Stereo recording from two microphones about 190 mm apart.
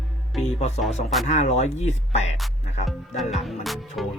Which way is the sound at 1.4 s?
35° left (ahead or behind).